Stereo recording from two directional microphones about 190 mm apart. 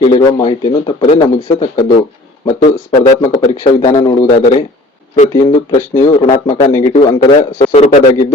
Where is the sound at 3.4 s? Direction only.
30° left (ahead or behind).